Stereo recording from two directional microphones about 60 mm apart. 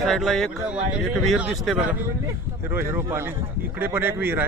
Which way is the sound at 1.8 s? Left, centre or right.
Right.